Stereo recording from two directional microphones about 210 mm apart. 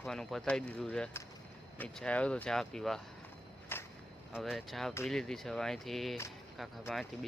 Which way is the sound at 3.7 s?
10° left (ahead or behind).